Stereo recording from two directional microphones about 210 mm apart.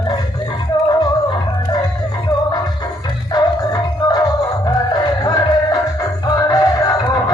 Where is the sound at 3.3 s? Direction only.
20° left (ahead or behind).